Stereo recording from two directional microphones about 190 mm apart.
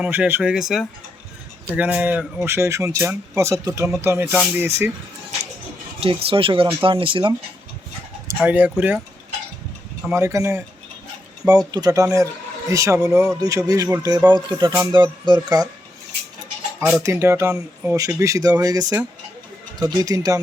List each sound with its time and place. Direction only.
0.0 s a man's voice: 10° right (ahead or behind)
6.0 s speech: 30° right (ahead or behind)
8.4 s a man's voice: 10° right (ahead or behind)
10.1 s a man's voice: 15° right (ahead or behind)
16.8 s a man's voice: 10° right (ahead or behind)